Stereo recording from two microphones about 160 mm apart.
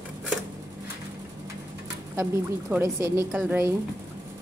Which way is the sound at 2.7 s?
15° right (ahead or behind).